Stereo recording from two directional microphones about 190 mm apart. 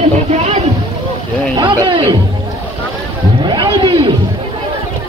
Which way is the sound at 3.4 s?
25° right (ahead or behind).